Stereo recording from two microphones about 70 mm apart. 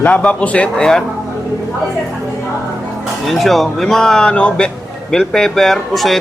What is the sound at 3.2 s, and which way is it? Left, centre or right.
Speech, centre.